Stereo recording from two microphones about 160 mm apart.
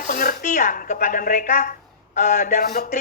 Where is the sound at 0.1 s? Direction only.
55° left (ahead or behind).